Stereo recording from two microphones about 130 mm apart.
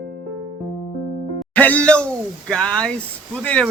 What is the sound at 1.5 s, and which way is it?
Speech, 10° left (ahead or behind).